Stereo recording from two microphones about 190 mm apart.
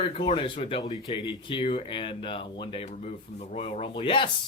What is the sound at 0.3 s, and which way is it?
Speech, 25° left (ahead or behind).